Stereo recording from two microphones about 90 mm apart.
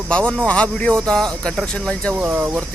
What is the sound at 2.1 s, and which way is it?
Speech, 20° right (ahead or behind).